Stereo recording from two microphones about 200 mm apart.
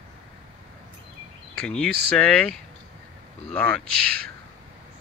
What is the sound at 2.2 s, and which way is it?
Speech, 5° left (ahead or behind).